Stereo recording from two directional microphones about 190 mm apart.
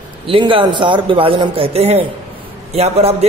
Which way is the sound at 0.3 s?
25° right (ahead or behind).